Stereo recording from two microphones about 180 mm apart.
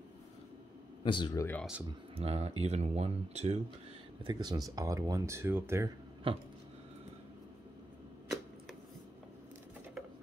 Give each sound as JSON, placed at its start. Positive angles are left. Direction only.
{"t": 1.0, "sound": "speech", "side_deg": 25}
{"t": 1.9, "sound": "speech", "side_deg": -35}
{"t": 4.3, "sound": "speech", "side_deg": -20}
{"t": 6.2, "sound": "speech", "side_deg": -30}